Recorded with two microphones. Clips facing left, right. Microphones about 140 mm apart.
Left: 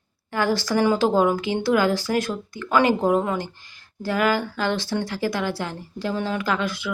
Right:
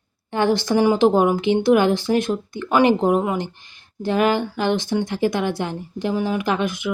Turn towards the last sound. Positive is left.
turn(degrees=-20)  # may be behind; listen again after turning